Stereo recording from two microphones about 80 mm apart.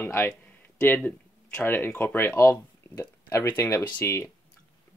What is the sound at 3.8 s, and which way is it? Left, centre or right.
Speech, left.